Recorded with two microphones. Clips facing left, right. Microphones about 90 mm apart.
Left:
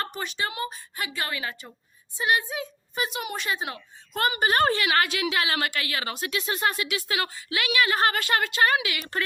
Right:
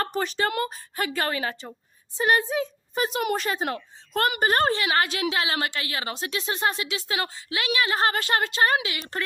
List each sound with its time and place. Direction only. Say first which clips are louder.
0.0 s speech: right 5 dB; 40° right (ahead or behind); by 4.4 s 55° right (ahead or behind)
4.4 s a woman's voice: left 2 dB; 40° right (ahead or behind)